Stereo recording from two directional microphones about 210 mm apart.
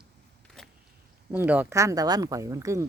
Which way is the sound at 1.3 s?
10° right (ahead or behind).